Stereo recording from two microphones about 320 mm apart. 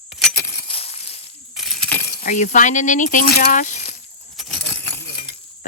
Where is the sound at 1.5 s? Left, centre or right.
Centre.